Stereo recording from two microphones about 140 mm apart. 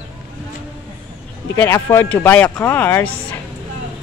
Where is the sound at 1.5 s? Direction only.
20° left (ahead or behind).